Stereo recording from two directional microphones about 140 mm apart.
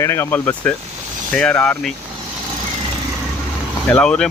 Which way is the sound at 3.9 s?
5° left (ahead or behind).